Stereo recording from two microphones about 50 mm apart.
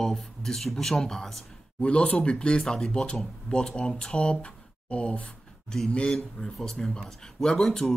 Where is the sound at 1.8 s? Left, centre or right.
Left.